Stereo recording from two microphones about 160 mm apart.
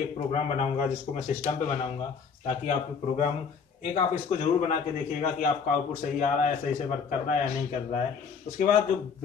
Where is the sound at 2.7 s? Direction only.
50° left (ahead or behind).